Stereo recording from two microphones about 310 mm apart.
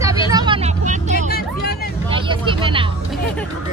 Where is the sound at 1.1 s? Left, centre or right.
Left.